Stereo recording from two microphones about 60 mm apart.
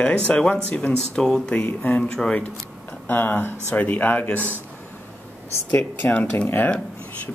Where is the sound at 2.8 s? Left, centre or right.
Left.